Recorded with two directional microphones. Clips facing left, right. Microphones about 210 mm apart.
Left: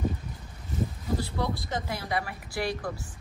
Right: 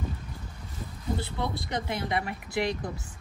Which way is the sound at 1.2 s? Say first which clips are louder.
Left 1 dB; 25° right (ahead or behind).